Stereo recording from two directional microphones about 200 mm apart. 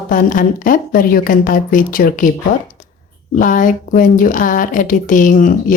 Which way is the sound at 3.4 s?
40° left (ahead or behind).